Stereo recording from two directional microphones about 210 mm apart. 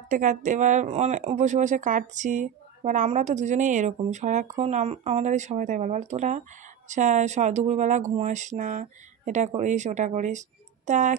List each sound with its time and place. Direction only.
0.1 s speech: 35° right (ahead or behind)